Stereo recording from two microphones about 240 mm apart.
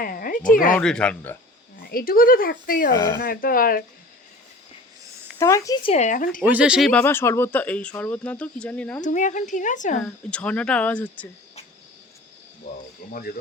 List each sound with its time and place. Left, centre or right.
0.0 s a sound: left
0.8 s speech: centre
1.8 s speech: left
2.9 s speech: centre
3.2 s speech: left
5.4 s speech: centre; by 6.4 s left
6.4 s speech: centre
9.0 s speech: left
10.0 s speech: centre
12.7 s speech: left